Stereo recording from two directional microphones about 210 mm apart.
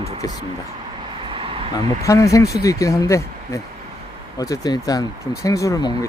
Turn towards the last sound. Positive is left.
turn(degrees=20)  # may be behind; listen again after turning